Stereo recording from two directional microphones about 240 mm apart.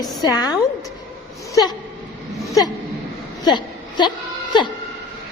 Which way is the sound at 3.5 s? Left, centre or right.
Centre.